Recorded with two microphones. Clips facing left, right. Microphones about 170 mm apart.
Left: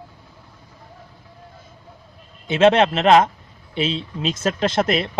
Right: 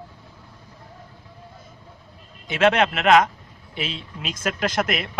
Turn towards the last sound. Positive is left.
turn(degrees=30)  # may be behind; listen again after turning